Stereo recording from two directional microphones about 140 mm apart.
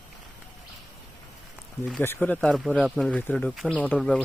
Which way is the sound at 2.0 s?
10° left (ahead or behind).